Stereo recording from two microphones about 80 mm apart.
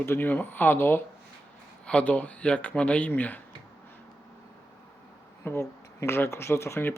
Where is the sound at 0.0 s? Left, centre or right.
Left.